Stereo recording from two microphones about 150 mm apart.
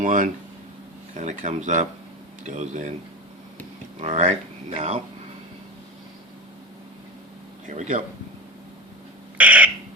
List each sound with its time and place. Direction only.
0.0 s speech: 60° right (ahead or behind)
4.0 s speech: 50° right (ahead or behind)
7.7 s speech: 55° right (ahead or behind)
9.4 s owl: 10° right (ahead or behind)